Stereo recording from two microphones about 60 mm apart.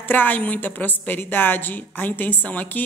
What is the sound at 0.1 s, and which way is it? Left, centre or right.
A woman's voice, left.